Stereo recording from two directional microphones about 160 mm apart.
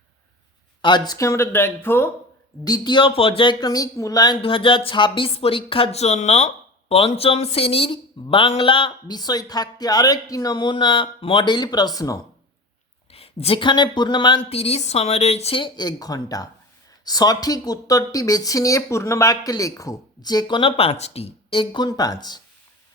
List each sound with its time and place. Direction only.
0.8 s speech: 30° left (ahead or behind)
2.6 s speech: 25° left (ahead or behind)
13.1 s speech: 40° left (ahead or behind)